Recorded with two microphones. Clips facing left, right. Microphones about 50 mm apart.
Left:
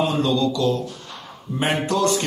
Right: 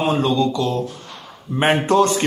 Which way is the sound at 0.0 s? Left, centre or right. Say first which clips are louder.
Right 2 dB; right.